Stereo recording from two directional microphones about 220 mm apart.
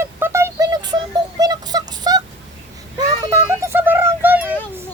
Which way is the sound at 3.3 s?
10° right (ahead or behind).